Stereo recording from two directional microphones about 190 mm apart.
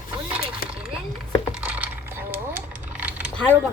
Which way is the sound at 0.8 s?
5° right (ahead or behind).